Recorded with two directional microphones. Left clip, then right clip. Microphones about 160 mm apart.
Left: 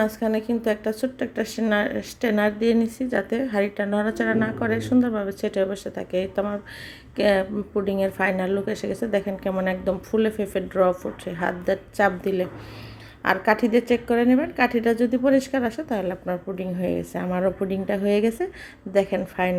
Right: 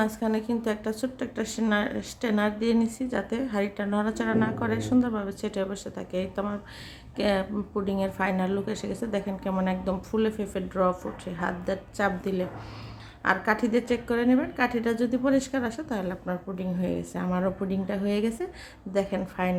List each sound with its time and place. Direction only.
0.0 s speech: 10° left (ahead or behind)